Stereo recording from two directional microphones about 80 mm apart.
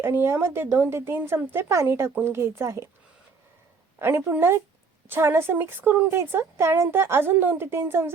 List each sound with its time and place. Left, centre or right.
0.0 s speech: right
3.9 s a woman's voice: right